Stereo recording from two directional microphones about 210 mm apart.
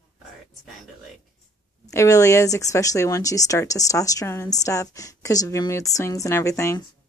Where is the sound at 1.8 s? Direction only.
15° left (ahead or behind).